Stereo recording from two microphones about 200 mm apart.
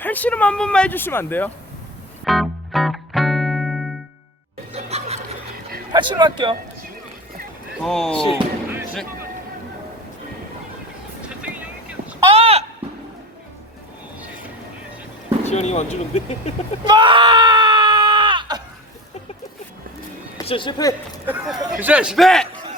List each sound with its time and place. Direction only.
0.0 s speech: 10° left (ahead or behind)
2.2 s music: centre (ahead or behind)
4.7 s snicker: 30° right (ahead or behind)
5.9 s speech: 20° right (ahead or behind)
7.8 s a man's voice: centre (ahead or behind)
11.2 s vehicle: 5° right (ahead or behind)
12.2 s a sound: 30° right (ahead or behind)
15.4 s speech: 35° left (ahead or behind)
16.8 s screaming: 20° right (ahead or behind)
20.4 s speech: 25° left (ahead or behind)
21.2 s a man's voice: 5° right (ahead or behind)